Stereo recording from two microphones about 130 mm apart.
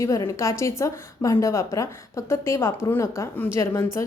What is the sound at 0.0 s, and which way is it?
A woman's voice, 25° left (ahead or behind).